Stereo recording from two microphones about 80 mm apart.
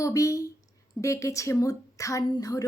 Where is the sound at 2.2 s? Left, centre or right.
Left.